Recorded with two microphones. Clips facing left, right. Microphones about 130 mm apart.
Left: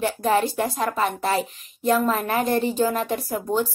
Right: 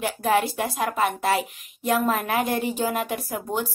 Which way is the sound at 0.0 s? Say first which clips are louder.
Left 1 dB; 10° right (ahead or behind).